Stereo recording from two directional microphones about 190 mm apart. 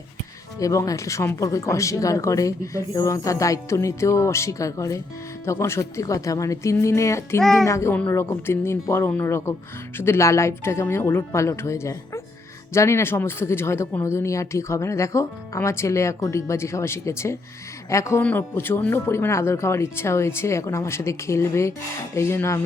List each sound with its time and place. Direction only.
0.6 s speech: 15° left (ahead or behind)